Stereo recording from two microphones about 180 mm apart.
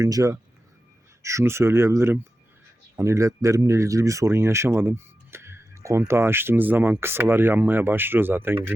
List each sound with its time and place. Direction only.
0.0 s speech: 20° right (ahead or behind)